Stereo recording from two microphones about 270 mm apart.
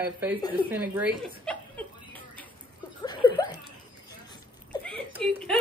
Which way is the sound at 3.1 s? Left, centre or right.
Centre.